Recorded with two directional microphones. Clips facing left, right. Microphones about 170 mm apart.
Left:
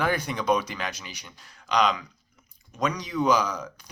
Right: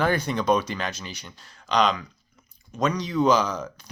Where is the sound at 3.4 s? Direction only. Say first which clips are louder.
Right 2 dB; 30° right (ahead or behind).